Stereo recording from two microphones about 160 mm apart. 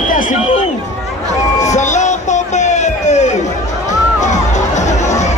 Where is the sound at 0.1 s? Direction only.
55° left (ahead or behind).